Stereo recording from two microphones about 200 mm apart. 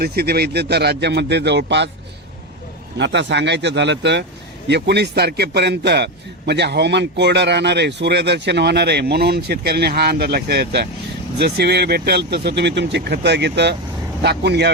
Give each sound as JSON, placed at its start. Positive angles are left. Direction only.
{"t": 0.0, "sound": "a man's voice", "side_deg": -50}
{"t": 3.0, "sound": "a man's voice", "side_deg": -60}